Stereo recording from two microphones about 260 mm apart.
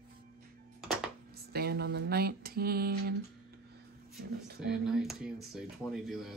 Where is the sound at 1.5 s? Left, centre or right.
Right.